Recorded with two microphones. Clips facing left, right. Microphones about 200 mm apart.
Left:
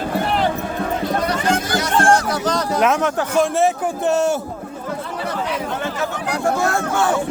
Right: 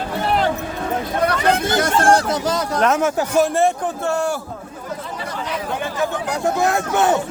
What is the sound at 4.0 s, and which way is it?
Speech, 20° left (ahead or behind).